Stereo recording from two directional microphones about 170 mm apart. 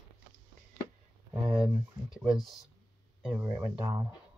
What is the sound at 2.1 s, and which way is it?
Speech, centre (ahead or behind).